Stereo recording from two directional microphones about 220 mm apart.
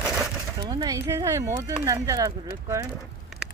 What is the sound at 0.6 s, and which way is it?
Speech, 20° right (ahead or behind).